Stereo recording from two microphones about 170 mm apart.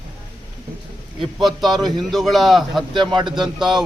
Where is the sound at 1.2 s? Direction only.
Centre (ahead or behind).